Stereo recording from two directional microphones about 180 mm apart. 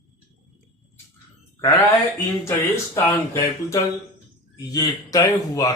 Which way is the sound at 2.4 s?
15° left (ahead or behind).